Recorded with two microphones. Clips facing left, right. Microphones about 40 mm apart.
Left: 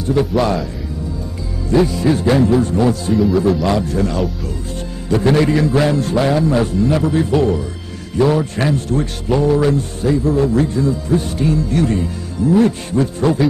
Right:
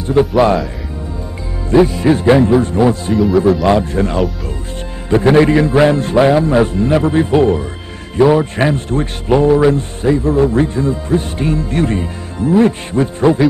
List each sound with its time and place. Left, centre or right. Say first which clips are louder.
0.2 s speech: right 6 dB; right
1.9 s speech: right 4 dB; right
3.2 s speech: right 4 dB; centre
3.6 s speech: right 4 dB; right